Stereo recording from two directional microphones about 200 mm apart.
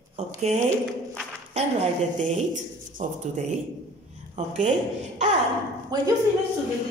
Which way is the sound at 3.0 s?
35° right (ahead or behind).